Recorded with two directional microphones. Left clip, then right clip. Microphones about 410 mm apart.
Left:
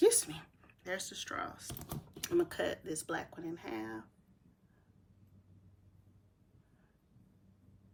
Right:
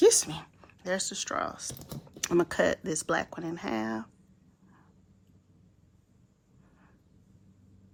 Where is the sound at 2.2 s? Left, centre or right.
Centre.